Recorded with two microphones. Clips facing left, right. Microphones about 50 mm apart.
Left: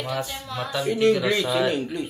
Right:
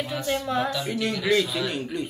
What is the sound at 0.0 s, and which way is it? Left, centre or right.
Speech, left.